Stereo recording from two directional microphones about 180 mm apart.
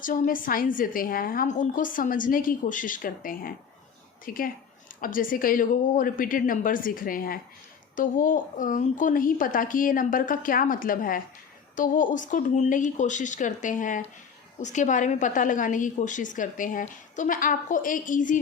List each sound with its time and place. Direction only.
0.0 s a woman's voice: 50° left (ahead or behind)